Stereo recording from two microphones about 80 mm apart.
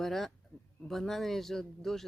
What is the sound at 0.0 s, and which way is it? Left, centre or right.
Speech, centre.